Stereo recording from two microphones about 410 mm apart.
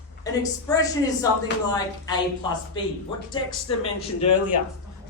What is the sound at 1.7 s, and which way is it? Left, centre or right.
Speech, centre.